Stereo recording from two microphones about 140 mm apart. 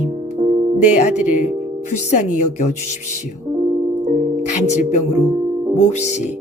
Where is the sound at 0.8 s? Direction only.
60° left (ahead or behind).